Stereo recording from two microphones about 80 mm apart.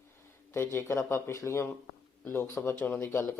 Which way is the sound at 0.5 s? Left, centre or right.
Left.